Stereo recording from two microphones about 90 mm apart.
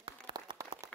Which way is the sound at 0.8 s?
35° right (ahead or behind).